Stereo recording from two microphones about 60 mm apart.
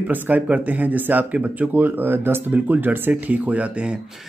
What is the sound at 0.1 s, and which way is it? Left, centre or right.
Speech, right.